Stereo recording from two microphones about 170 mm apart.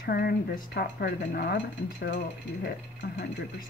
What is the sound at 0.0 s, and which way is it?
Speech, 65° left (ahead or behind).